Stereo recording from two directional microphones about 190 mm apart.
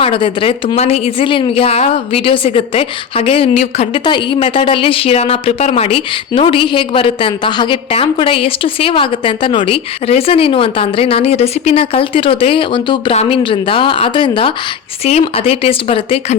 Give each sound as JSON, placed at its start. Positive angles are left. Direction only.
{"t": 0.0, "sound": "a woman's voice", "side_deg": 30}